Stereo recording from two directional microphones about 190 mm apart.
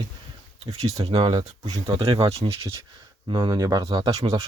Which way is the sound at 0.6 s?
35° right (ahead or behind).